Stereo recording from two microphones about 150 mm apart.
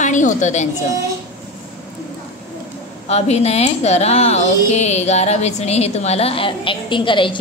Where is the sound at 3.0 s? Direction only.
45° left (ahead or behind).